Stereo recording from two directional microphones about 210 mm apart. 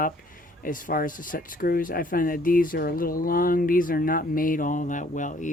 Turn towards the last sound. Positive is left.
turn(degrees=35)  # may be behind; listen again after turning